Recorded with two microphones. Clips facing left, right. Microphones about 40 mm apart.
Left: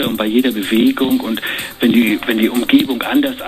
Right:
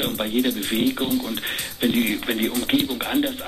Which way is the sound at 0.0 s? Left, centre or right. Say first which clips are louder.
Left 8 dB; left.